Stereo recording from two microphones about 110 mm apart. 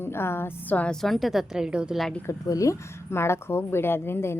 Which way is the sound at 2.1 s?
20° left (ahead or behind).